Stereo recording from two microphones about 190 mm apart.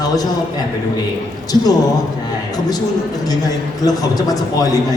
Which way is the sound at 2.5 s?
20° left (ahead or behind).